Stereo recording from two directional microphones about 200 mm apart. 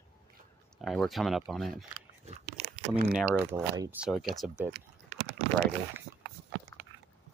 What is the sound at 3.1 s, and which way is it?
Speech, 10° right (ahead or behind).